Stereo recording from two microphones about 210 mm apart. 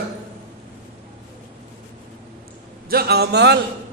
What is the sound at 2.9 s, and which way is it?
Speech, 50° right (ahead or behind).